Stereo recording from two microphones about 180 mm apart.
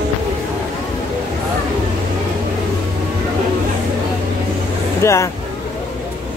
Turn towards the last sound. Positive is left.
turn(degrees=15)  # may be behind; listen again after turning